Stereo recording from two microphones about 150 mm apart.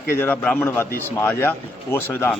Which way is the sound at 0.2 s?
10° left (ahead or behind).